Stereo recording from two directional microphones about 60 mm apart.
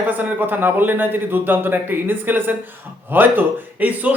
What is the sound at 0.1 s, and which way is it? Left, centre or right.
A man's voice, right.